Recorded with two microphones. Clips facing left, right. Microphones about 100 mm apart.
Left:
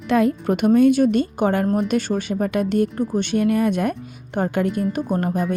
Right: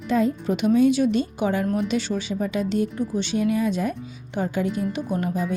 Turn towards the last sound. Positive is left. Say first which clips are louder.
# left 4 dB
turn(degrees=50)  # may be behind; listen again after turning